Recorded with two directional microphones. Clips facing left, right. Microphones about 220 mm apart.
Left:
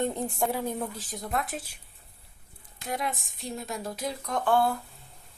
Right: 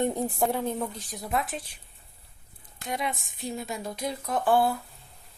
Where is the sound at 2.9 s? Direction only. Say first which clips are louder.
Even; centre (ahead or behind).